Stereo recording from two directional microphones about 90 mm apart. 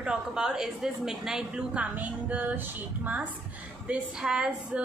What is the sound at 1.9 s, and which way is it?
Music, 20° right (ahead or behind).